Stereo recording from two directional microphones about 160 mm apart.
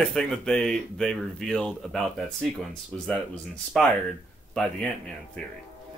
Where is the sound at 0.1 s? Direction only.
5° left (ahead or behind).